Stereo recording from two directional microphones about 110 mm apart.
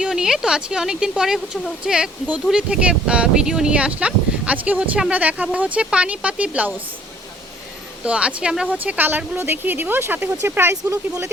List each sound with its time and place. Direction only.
0.0 s a woman's voice: 5° right (ahead or behind)
8.0 s a woman's voice: 10° right (ahead or behind)